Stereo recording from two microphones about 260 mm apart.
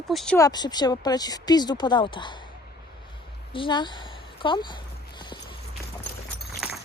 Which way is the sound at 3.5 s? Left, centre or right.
Centre.